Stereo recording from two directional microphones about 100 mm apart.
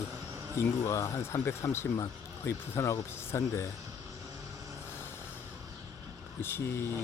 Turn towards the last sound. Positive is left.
turn(degrees=25)  # may be behind; listen again after turning